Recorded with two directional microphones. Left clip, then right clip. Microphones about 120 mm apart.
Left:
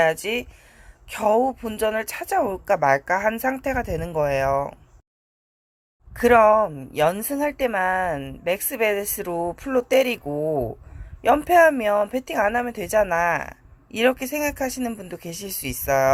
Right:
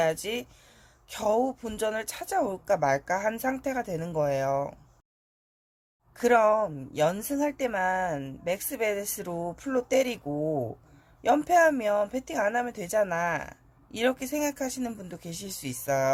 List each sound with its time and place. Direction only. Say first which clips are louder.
0.0 s speech: left 7 dB; 20° left (ahead or behind)
6.1 s speech: left 7 dB; 20° left (ahead or behind)